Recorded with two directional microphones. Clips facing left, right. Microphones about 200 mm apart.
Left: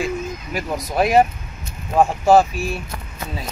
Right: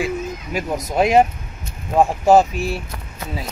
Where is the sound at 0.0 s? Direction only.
15° right (ahead or behind).